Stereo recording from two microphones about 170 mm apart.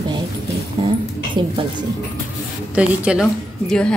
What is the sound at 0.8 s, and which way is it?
Speech, 30° right (ahead or behind).